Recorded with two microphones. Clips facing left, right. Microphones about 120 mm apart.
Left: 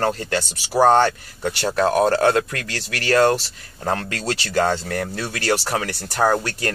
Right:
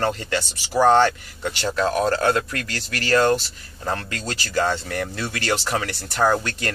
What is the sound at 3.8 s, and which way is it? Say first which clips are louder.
Speech: left 3 dB; 40° left (ahead or behind).